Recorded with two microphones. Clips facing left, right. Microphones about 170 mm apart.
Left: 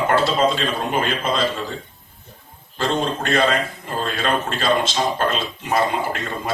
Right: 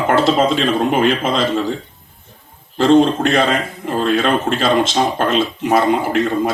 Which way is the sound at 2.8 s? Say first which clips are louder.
Right 10 dB; 55° right (ahead or behind).